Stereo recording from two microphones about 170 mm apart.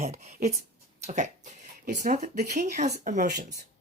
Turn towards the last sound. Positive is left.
turn(degrees=-50)  # may be behind; listen again after turning